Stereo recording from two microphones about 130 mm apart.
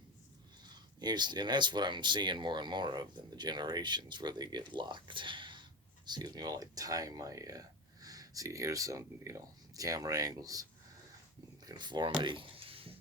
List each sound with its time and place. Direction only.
0.6 s speech: 35° right (ahead or behind)